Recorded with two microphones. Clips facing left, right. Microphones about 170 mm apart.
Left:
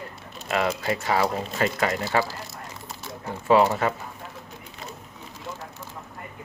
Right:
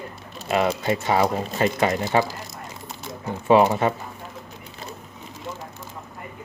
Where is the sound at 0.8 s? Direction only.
25° right (ahead or behind).